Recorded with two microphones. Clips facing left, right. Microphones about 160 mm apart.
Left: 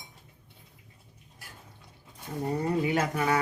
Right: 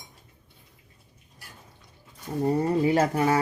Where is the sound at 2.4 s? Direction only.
30° right (ahead or behind).